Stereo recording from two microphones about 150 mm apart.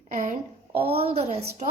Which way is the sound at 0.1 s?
55° right (ahead or behind).